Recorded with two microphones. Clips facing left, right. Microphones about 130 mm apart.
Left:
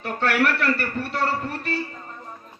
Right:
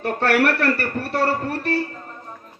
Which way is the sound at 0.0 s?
45° right (ahead or behind).